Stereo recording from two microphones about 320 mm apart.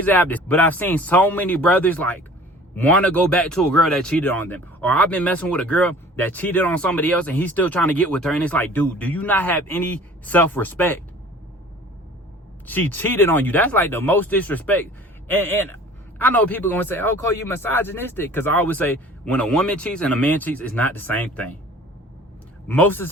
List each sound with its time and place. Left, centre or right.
0.0 s speech: centre
12.6 s speech: centre
22.7 s speech: centre